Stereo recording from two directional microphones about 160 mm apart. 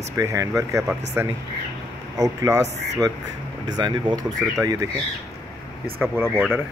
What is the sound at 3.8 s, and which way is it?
Speech, 30° right (ahead or behind).